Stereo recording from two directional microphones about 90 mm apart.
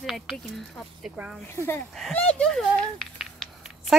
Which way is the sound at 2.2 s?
15° left (ahead or behind).